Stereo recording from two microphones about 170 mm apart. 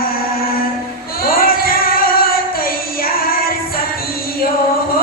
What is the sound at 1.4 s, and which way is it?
Music, 60° left (ahead or behind).